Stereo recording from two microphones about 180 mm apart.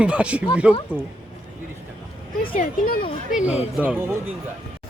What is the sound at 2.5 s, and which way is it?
Speech, 50° left (ahead or behind).